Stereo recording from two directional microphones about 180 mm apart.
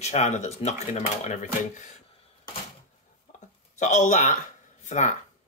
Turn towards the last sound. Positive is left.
turn(degrees=40)  # may be behind; listen again after turning